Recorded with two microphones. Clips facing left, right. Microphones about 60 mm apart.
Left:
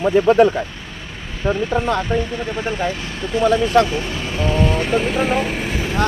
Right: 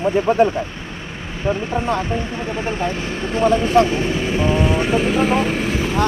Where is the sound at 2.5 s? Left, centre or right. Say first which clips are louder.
Even; right; by 6.0 s centre.